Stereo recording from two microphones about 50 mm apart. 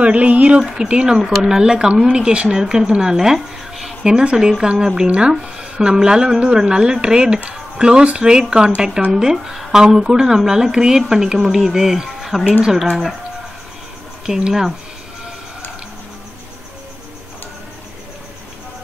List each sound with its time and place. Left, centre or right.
0.0 s speech: right
0.6 s a woman's voice: centre
4.0 s a woman's voice: centre
5.0 s a woman's voice: right; by 12.4 s centre
14.2 s a woman's voice: centre